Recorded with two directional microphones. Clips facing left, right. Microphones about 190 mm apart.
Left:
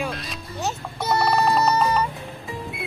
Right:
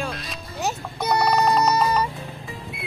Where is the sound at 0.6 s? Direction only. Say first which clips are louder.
Right 1 dB; 15° right (ahead or behind).